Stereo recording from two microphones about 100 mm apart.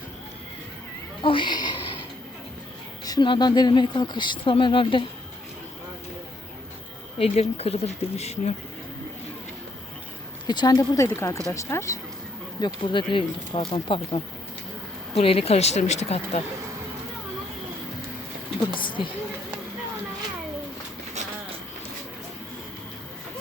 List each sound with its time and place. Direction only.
1.2 s speech: 55° left (ahead or behind)
3.0 s a sound: 40° left (ahead or behind)
3.2 s speech: 45° left (ahead or behind)
7.2 s speech: 90° left
10.4 s speech: 45° left (ahead or behind)
11.0 s speech: 30° left (ahead or behind)
12.5 s speech: 50° left (ahead or behind)
15.2 s speech: 70° left (ahead or behind); by 16.4 s 90° left
18.7 s speech: 55° left (ahead or behind)